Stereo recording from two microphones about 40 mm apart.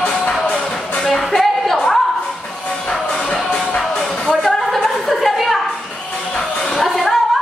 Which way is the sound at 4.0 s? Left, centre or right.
Centre.